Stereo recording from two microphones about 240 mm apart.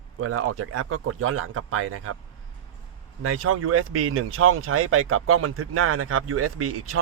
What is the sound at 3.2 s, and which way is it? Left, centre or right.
Speech, right.